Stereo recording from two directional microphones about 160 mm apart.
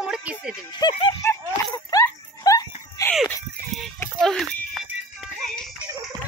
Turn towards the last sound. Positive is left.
turn(degrees=0)  # may be behind; listen again after turning